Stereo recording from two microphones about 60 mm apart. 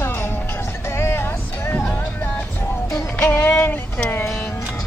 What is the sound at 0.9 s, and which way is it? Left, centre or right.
Vehicle, left.